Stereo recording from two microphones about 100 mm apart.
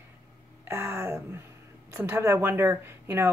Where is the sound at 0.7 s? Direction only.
25° right (ahead or behind).